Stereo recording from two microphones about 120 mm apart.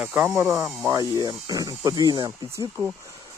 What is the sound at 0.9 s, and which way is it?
Speech, 30° right (ahead or behind).